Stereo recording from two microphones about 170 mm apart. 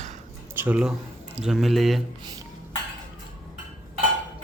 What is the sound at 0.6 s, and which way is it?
A man's voice, 5° right (ahead or behind).